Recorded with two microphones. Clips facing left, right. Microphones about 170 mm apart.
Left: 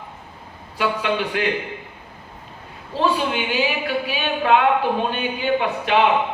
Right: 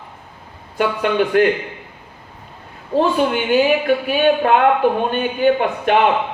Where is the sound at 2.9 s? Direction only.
50° right (ahead or behind).